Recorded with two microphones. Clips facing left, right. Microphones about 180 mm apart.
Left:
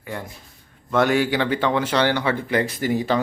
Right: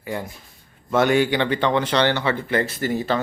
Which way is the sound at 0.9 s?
Centre (ahead or behind).